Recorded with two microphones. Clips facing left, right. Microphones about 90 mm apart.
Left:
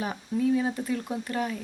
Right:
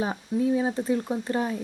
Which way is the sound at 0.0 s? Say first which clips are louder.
Right 2 dB; 25° right (ahead or behind).